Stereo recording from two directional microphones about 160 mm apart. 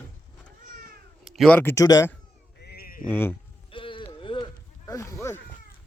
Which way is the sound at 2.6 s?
75° left (ahead or behind).